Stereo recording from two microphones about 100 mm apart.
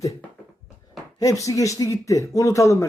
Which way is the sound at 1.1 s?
35° left (ahead or behind).